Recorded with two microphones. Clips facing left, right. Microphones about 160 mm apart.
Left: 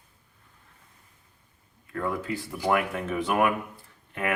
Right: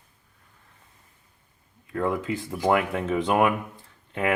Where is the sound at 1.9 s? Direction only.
20° right (ahead or behind).